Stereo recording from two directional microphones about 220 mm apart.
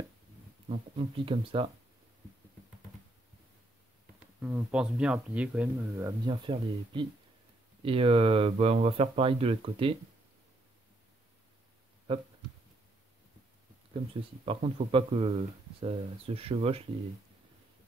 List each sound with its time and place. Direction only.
0.7 s speech: 25° right (ahead or behind)
4.4 s speech: 10° right (ahead or behind); by 9.9 s 25° right (ahead or behind)
14.4 s speech: 25° right (ahead or behind)